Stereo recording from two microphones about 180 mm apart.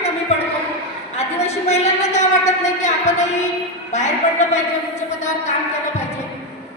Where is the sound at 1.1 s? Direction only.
35° left (ahead or behind).